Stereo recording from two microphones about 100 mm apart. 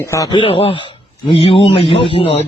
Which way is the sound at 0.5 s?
70° left (ahead or behind).